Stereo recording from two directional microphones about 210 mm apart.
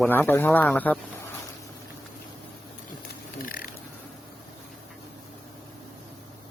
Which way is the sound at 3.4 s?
40° left (ahead or behind).